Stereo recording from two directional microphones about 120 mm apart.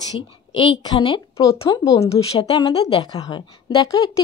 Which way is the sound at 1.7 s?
25° left (ahead or behind).